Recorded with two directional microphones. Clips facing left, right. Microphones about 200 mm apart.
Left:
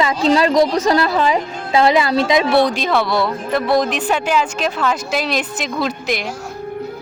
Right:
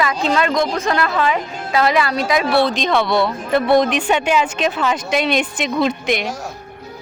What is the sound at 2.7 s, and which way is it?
A woman's voice, 5° left (ahead or behind).